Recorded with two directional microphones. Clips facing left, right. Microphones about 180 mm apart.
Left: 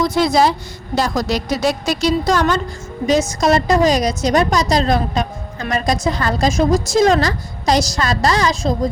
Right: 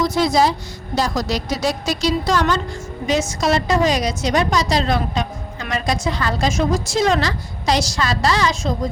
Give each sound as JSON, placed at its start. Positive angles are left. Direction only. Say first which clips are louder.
{"t": 0.0, "sound": "a woman's voice", "louder": "left 2 dB", "side_deg": 55}